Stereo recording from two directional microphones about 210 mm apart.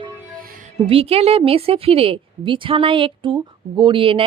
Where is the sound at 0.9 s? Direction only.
25° right (ahead or behind).